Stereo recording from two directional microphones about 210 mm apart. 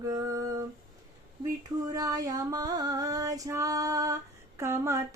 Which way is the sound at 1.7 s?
15° right (ahead or behind).